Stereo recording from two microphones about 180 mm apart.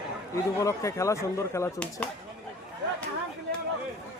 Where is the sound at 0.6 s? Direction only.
15° left (ahead or behind).